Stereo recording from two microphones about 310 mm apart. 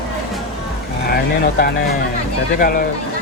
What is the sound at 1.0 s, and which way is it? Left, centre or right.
Speech, left.